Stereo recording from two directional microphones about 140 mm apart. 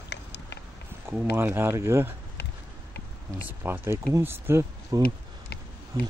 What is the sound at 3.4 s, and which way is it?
Speech, 15° right (ahead or behind).